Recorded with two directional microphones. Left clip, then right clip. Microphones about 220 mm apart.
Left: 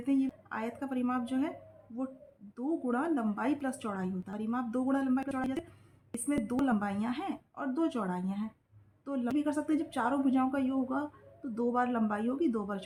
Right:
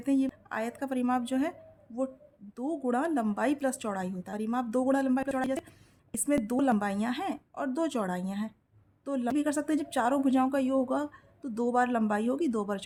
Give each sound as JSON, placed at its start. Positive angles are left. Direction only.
{"t": 0.0, "sound": "a woman's voice", "side_deg": -50}
{"t": 2.6, "sound": "a woman's voice", "side_deg": -50}